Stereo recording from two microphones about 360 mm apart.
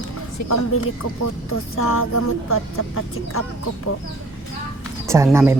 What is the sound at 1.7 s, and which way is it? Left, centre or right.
Speech, left.